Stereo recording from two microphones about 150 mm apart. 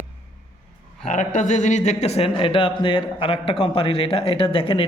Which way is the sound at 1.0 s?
55° left (ahead or behind).